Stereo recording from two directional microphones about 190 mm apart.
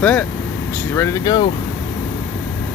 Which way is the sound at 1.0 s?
15° left (ahead or behind).